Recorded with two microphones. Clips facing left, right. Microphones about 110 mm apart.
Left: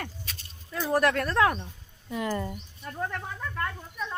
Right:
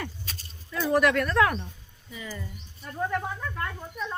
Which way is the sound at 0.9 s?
35° left (ahead or behind).